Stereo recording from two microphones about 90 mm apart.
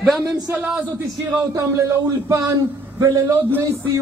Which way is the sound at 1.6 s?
35° right (ahead or behind).